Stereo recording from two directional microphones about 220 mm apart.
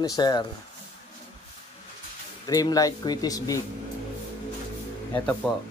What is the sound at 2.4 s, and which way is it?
Speech, 15° left (ahead or behind).